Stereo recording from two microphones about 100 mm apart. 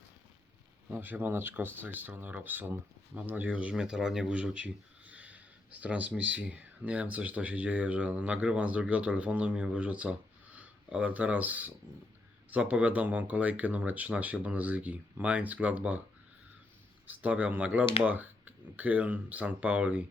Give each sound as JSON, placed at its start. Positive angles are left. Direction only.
{"t": 0.9, "sound": "speech", "side_deg": -20}
{"t": 17.1, "sound": "speech", "side_deg": -15}